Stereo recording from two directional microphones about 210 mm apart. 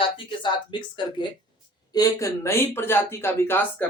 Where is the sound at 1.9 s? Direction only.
15° left (ahead or behind).